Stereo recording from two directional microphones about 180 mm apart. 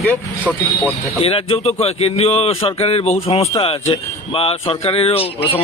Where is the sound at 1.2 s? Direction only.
30° left (ahead or behind).